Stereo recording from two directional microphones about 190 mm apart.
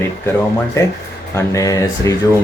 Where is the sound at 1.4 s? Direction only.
15° left (ahead or behind).